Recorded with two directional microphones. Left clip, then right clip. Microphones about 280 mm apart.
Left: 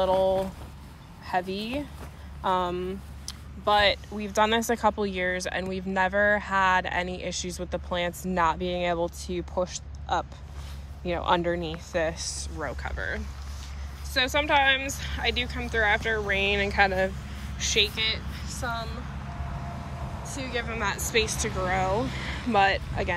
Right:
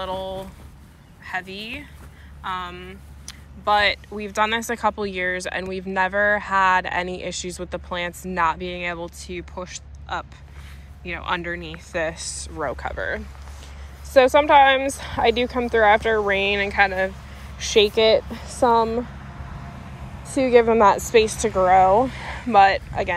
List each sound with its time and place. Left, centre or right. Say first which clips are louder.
0.0 s a woman's voice: left 6 dB; centre
19.6 s train: left 2 dB; left
20.4 s a woman's voice: right 16 dB; centre